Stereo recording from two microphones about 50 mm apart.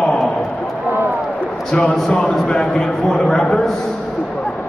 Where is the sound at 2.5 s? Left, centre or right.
Centre.